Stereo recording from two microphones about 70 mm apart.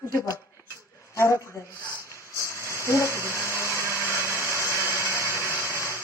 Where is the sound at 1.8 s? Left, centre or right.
Left.